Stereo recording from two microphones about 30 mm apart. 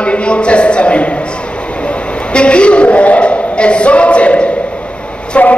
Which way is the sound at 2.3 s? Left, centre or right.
Left.